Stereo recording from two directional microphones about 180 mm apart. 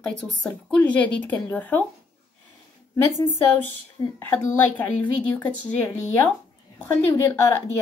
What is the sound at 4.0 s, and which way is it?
Speech, 20° left (ahead or behind).